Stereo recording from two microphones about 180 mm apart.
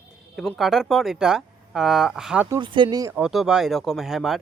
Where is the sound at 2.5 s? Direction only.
25° right (ahead or behind).